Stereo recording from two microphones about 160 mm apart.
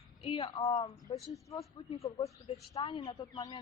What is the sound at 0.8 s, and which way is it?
A woman's voice, 25° left (ahead or behind).